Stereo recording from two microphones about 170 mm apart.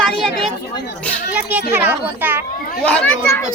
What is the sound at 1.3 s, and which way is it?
A child's voice, 10° right (ahead or behind).